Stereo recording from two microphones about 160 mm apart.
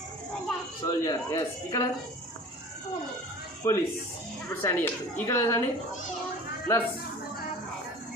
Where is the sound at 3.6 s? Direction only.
20° left (ahead or behind).